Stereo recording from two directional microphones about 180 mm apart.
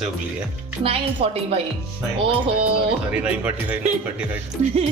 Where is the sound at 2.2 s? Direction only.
30° right (ahead or behind).